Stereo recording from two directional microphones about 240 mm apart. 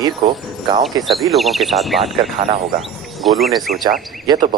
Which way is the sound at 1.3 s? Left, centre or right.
Centre.